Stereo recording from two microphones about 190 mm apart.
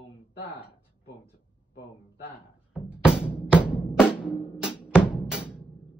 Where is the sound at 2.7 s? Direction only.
5° right (ahead or behind).